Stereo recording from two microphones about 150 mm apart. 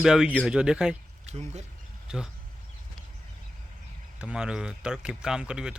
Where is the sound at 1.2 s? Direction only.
45° right (ahead or behind).